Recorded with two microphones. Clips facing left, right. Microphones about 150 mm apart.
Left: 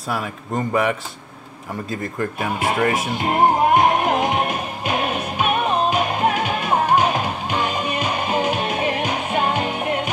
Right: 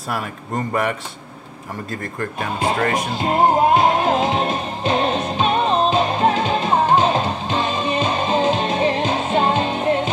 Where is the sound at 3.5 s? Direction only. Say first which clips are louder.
Right 1 dB; 20° right (ahead or behind).